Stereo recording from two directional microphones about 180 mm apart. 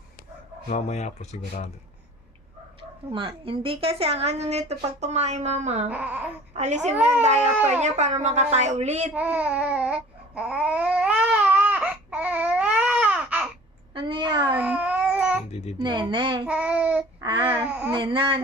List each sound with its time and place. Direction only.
0.7 s speech: 40° left (ahead or behind)
3.1 s a woman's voice: 30° right (ahead or behind)
5.9 s a sound: 10° right (ahead or behind)
6.6 s a woman's voice: 40° right (ahead or behind)
6.9 s a sound: 10° right (ahead or behind)
7.2 s a woman's voice: 40° right (ahead or behind)
9.1 s babbling: 10° right (ahead or behind)
13.9 s a woman's voice: 30° right (ahead or behind)
14.5 s babbling: 10° right (ahead or behind)
15.8 s speech: 25° right (ahead or behind)
16.5 s child singing: 5° right (ahead or behind)
17.2 s a sound: 25° right (ahead or behind)
17.7 s a sound: 10° right (ahead or behind)
17.9 s speech: 25° right (ahead or behind)